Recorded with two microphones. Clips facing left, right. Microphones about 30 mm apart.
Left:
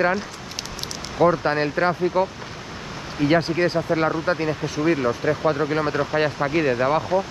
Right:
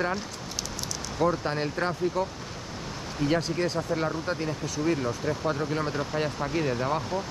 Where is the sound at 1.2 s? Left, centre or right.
Left.